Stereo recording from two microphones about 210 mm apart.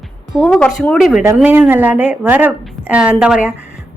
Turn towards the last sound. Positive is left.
turn(degrees=-5)  # may be behind; listen again after turning